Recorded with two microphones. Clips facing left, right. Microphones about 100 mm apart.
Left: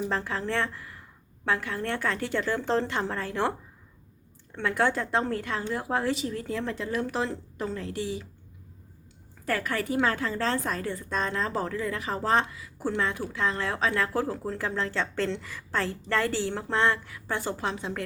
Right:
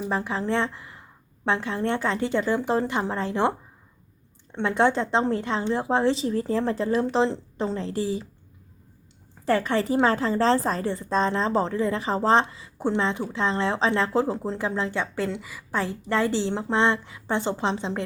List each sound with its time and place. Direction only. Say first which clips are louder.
0.1 s a woman's voice: right 4 dB; 15° right (ahead or behind)
4.5 s a woman's voice: right 4 dB; 25° right (ahead or behind)
9.5 s a woman's voice: right 6 dB; 25° right (ahead or behind)